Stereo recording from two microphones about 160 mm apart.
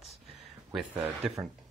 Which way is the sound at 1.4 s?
20° right (ahead or behind).